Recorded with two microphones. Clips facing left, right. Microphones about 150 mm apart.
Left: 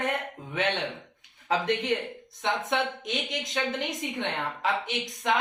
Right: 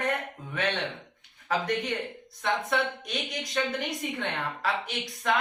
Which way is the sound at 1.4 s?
25° left (ahead or behind).